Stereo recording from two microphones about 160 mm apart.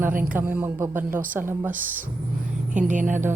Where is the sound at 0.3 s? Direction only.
10° right (ahead or behind).